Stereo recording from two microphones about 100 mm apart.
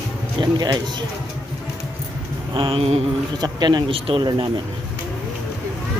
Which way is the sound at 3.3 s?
45° right (ahead or behind).